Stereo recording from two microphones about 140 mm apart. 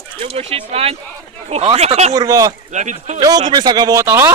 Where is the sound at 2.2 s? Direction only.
25° right (ahead or behind).